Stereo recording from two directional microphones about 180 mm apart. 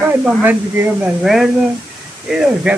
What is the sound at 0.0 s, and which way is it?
Speech, 10° right (ahead or behind).